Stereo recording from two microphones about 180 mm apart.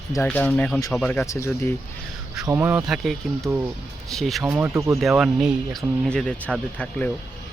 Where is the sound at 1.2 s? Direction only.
15° left (ahead or behind).